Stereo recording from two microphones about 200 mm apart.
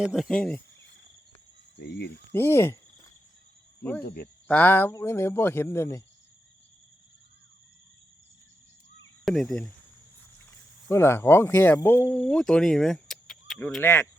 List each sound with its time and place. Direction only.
0.0 s speech: centre (ahead or behind)
0.8 s cricket: 65° left (ahead or behind)
1.7 s speech: 55° left (ahead or behind)
2.3 s a sound: 10° left (ahead or behind)
4.0 s speech: 50° left (ahead or behind)
4.4 s speech: 10° left (ahead or behind)
9.2 s speech: centre (ahead or behind)
10.8 s speech: 15° left (ahead or behind)